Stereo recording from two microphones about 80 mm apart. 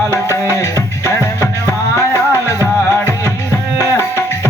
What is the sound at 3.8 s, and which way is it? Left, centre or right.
Tabla, left.